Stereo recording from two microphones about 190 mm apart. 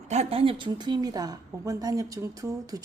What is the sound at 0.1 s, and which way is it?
A woman's voice, 35° right (ahead or behind).